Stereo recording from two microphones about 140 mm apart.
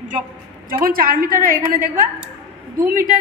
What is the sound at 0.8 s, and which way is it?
A woman's voice, 90° right.